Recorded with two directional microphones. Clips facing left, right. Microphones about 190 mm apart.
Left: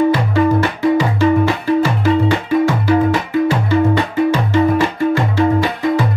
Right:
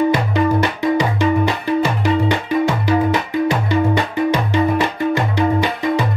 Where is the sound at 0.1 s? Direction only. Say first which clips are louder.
Left 2 dB; 15° right (ahead or behind).